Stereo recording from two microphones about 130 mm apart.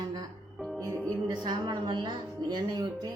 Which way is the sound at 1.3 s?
35° right (ahead or behind).